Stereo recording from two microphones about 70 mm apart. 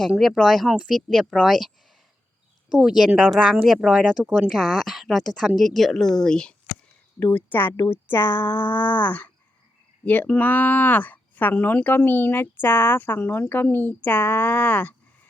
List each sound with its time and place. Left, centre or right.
0.2 s speech: centre
2.7 s speech: centre
7.3 s speech: left